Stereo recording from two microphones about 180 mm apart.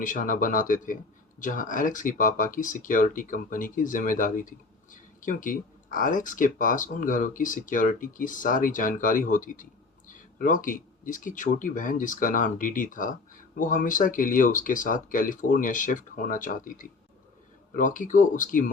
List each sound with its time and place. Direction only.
0.0 s speech: 50° left (ahead or behind)